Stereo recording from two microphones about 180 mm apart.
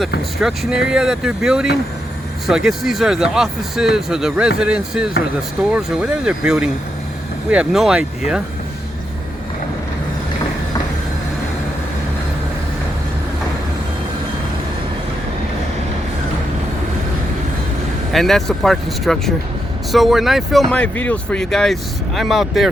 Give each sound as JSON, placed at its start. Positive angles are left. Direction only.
{"t": 0.3, "sound": "speech", "side_deg": 0}
{"t": 18.1, "sound": "speech", "side_deg": 0}